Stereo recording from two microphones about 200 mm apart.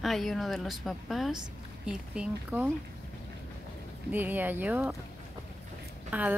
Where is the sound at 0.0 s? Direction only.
Centre (ahead or behind).